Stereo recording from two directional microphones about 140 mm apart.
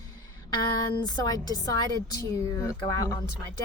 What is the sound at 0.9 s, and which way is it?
Speech, 30° left (ahead or behind).